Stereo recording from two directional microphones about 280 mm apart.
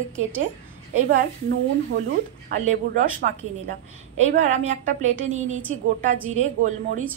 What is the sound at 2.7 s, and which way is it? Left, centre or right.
A woman's voice, right.